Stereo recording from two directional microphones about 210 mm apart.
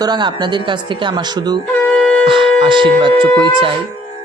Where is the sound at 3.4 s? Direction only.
20° right (ahead or behind).